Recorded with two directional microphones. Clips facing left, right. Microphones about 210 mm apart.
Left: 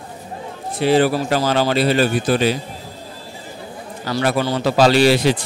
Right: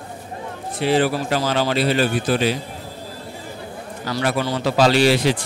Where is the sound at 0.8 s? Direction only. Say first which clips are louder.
Left 3 dB; 40° left (ahead or behind).